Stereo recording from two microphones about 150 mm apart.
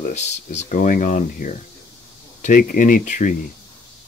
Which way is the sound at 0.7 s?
70° left (ahead or behind).